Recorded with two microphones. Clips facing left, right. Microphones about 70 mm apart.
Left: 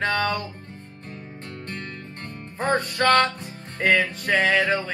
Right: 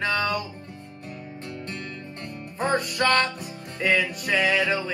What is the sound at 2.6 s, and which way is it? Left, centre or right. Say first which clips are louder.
Music: left 2 dB; left.